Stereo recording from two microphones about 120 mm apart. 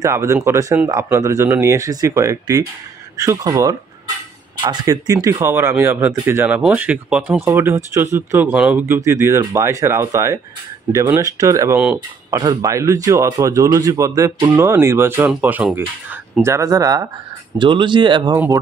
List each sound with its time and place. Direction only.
0.0 s speech: 25° right (ahead or behind)
17.6 s speech: 40° right (ahead or behind)